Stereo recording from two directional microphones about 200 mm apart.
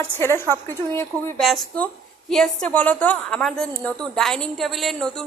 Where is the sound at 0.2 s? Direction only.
10° left (ahead or behind).